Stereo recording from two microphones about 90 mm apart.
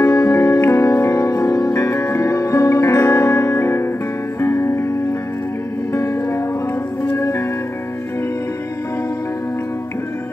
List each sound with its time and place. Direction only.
0.0 s music: 35° left (ahead or behind)
5.9 s music: 35° left (ahead or behind)